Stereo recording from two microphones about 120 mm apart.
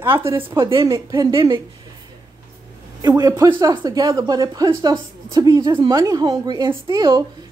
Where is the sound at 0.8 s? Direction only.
30° right (ahead or behind).